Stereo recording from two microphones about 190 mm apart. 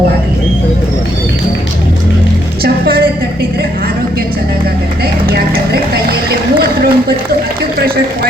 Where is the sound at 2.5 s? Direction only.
55° right (ahead or behind).